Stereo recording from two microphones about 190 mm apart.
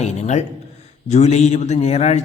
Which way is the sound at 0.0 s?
35° left (ahead or behind).